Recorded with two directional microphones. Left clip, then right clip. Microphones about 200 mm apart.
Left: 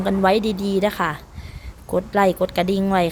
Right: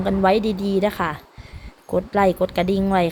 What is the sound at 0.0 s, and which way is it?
A woman's voice, 5° right (ahead or behind).